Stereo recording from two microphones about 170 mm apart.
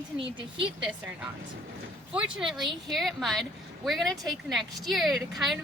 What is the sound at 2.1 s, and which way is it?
A woman's voice, 5° right (ahead or behind).